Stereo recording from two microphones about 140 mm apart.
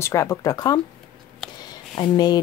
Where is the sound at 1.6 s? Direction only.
30° left (ahead or behind).